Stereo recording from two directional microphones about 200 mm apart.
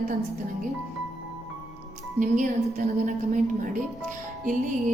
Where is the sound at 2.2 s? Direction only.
40° right (ahead or behind).